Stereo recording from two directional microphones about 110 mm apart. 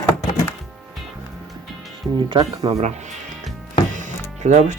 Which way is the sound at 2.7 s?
90° right.